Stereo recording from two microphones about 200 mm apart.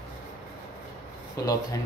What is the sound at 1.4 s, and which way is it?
Speech, 15° left (ahead or behind).